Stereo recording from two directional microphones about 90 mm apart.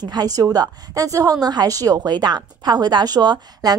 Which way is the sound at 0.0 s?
50° right (ahead or behind).